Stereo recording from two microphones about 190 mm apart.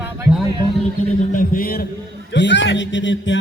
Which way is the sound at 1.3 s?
50° left (ahead or behind).